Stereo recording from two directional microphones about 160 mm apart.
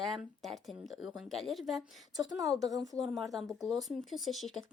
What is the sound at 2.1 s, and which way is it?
Speech, 20° right (ahead or behind).